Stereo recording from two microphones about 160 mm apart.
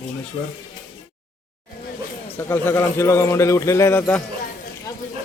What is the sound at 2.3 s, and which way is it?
Speech, 15° left (ahead or behind).